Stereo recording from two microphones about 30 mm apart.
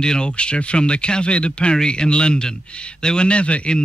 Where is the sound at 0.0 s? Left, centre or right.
Left.